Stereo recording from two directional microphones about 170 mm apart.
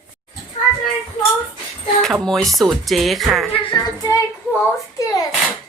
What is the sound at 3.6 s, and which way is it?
Music, 25° left (ahead or behind).